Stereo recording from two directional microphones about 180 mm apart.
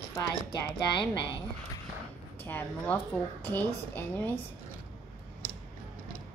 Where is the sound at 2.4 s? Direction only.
10° left (ahead or behind).